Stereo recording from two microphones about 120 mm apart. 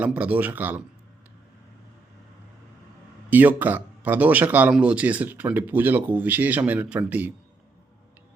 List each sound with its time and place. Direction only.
0.0 s speech: 10° right (ahead or behind)
3.2 s speech: 15° right (ahead or behind)